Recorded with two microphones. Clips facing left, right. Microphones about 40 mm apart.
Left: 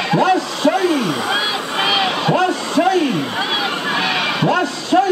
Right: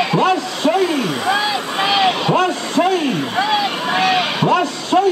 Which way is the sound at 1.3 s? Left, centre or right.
Centre.